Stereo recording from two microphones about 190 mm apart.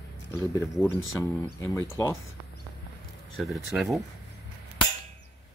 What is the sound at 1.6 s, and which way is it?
Speech, 15° left (ahead or behind).